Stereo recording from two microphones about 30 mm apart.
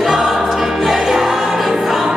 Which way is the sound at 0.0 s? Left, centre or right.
Centre.